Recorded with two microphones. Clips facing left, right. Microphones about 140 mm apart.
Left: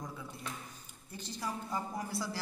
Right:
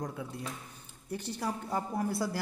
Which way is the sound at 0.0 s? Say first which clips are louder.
Right 6 dB; 65° right (ahead or behind).